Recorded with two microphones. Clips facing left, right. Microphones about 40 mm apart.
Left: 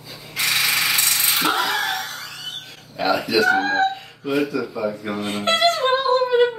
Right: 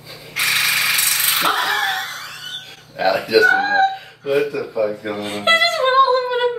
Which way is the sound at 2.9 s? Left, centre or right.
Centre.